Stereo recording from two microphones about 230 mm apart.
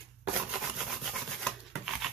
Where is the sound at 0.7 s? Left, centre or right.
Centre.